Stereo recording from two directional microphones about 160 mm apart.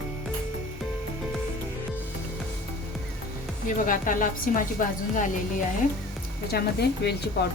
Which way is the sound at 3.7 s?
55° left (ahead or behind).